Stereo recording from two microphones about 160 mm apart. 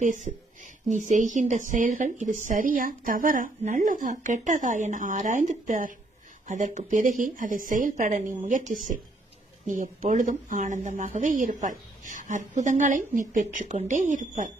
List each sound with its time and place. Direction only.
0.0 s speech: 50° right (ahead or behind)